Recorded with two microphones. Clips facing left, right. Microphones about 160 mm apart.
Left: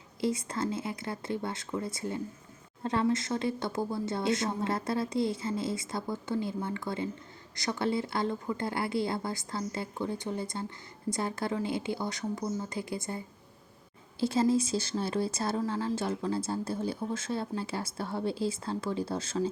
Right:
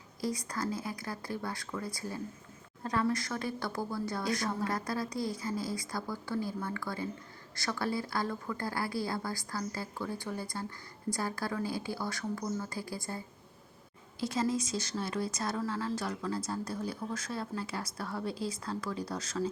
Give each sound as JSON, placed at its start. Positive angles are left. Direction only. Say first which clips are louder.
{"t": 0.2, "sound": "speech", "louder": "left 4 dB", "side_deg": 25}